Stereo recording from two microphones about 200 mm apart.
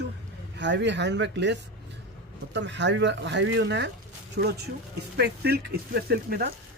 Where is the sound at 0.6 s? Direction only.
60° right (ahead or behind).